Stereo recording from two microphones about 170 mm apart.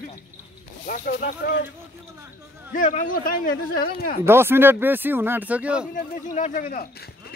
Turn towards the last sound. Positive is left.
turn(degrees=55)  # may be behind; listen again after turning